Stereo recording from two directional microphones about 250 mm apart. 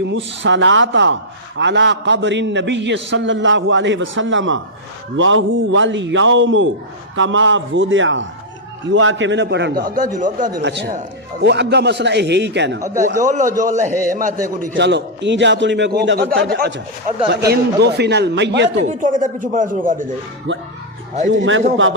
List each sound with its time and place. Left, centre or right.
0.4 s a man's voice: right
10.6 s a man's voice: right
12.8 s a man's voice: right
18.9 s speech: right
20.5 s a man's voice: right